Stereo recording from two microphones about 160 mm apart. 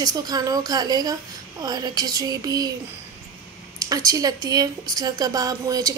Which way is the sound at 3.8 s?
20° right (ahead or behind).